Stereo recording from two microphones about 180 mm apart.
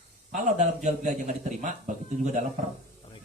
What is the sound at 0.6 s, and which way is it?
A man's voice, 40° right (ahead or behind).